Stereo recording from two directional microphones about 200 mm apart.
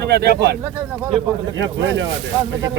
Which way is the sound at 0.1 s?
55° right (ahead or behind).